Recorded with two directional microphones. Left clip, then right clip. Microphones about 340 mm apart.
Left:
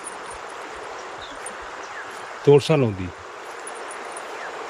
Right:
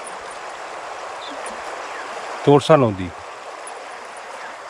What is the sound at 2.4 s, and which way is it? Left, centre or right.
Speech, centre.